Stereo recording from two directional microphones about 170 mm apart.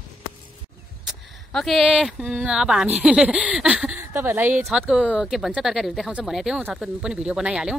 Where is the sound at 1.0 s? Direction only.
Centre (ahead or behind).